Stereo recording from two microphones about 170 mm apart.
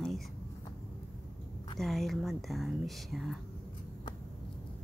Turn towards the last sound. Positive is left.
turn(degrees=0)  # may be behind; listen again after turning